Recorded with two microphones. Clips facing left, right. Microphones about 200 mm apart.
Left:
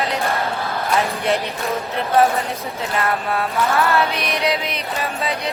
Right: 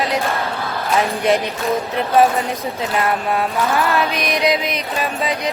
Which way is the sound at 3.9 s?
15° right (ahead or behind).